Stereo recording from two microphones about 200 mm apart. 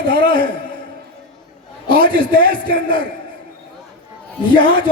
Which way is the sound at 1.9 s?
25° left (ahead or behind).